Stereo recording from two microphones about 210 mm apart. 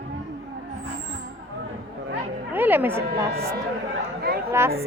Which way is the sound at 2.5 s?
10° right (ahead or behind).